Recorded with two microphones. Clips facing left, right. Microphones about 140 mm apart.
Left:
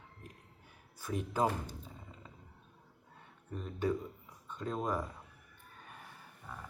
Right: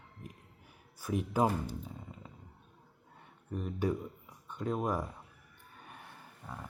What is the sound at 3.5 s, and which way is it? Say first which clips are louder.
Speech: right 1 dB; 15° right (ahead or behind).